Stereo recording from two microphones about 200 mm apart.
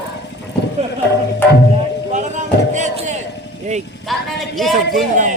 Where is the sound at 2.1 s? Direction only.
35° right (ahead or behind).